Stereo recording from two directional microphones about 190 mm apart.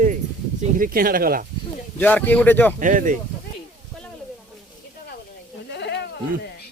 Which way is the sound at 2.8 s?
45° right (ahead or behind).